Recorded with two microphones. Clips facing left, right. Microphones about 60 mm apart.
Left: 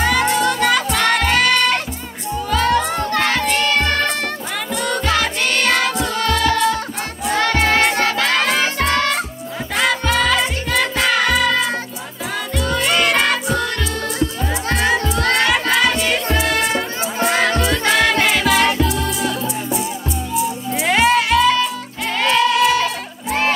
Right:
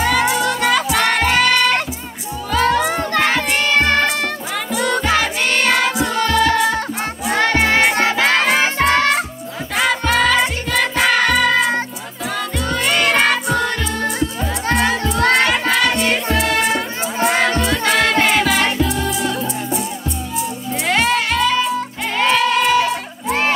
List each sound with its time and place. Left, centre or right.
0.0 s music: centre
3.2 s child singing: right
3.4 s music: centre
4.6 s music: centre
7.5 s music: centre
9.8 s music: centre
12.6 s music: centre
22.1 s crowd: centre